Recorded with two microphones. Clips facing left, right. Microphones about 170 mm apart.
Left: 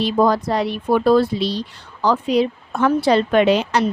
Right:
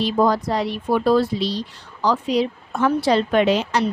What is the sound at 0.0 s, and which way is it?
Speech, 60° left (ahead or behind).